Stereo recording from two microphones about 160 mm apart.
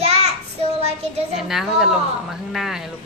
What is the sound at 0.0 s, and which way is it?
Child singing, 40° right (ahead or behind).